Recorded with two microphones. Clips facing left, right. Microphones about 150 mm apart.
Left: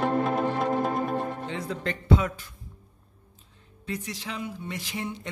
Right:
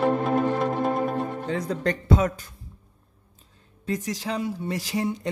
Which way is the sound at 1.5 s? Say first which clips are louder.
Right 6 dB; 40° right (ahead or behind).